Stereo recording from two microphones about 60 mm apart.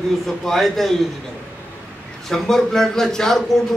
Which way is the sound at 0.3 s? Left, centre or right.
Centre.